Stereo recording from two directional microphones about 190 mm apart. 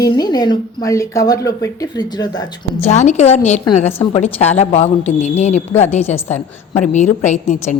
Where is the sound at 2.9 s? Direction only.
35° left (ahead or behind).